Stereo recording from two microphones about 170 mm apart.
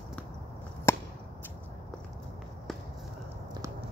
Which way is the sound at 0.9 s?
15° left (ahead or behind).